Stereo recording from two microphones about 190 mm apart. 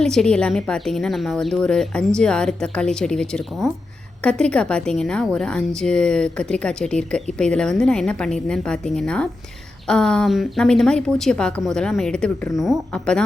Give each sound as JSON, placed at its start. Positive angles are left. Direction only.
{"t": 0.0, "sound": "speech", "side_deg": 5}